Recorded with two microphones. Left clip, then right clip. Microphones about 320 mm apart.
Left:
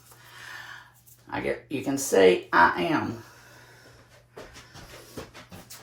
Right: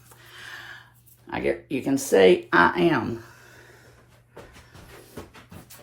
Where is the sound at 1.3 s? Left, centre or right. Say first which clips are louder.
Right 3 dB; right.